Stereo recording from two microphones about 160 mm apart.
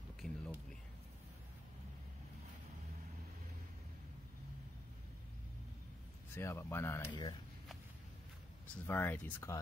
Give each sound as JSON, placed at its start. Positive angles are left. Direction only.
{"t": 0.2, "sound": "a sound", "side_deg": 5}
{"t": 6.3, "sound": "speech", "side_deg": 15}
{"t": 8.8, "sound": "speech", "side_deg": 15}